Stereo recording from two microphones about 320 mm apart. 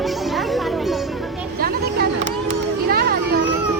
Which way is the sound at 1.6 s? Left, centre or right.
Right.